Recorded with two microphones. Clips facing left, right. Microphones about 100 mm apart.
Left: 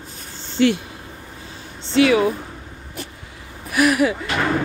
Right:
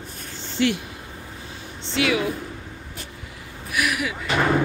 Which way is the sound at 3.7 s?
40° left (ahead or behind).